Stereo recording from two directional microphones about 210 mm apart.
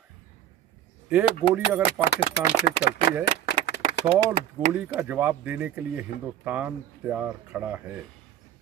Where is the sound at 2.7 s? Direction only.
50° left (ahead or behind).